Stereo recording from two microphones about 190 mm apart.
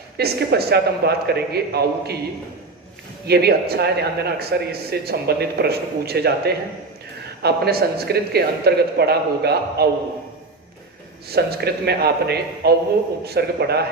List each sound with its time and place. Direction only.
0.2 s speech: 55° right (ahead or behind)
3.2 s speech: 55° right (ahead or behind)
11.3 s speech: 55° right (ahead or behind)